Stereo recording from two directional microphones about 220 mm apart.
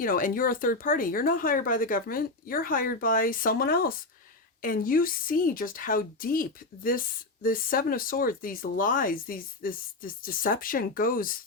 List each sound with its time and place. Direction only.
0.0 s speech: 40° left (ahead or behind)